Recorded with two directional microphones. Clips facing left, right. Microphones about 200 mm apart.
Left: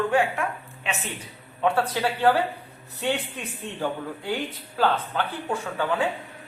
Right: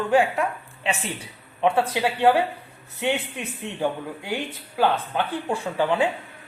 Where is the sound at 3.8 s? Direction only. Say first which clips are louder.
Right 3 dB; 15° right (ahead or behind).